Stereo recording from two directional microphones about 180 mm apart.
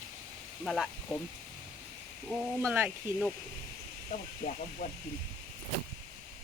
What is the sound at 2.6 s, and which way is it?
Speech, 15° right (ahead or behind).